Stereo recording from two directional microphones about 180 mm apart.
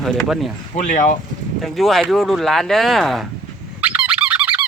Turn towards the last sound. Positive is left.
turn(degrees=-10)  # may be behind; listen again after turning